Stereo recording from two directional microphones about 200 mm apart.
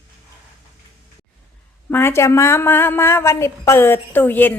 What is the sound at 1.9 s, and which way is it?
A woman's voice, 10° left (ahead or behind).